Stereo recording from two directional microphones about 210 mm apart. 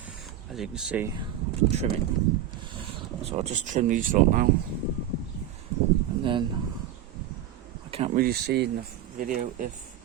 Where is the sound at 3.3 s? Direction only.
30° right (ahead or behind).